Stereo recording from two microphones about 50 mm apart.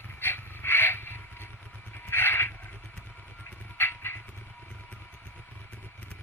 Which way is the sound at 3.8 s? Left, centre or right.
Left.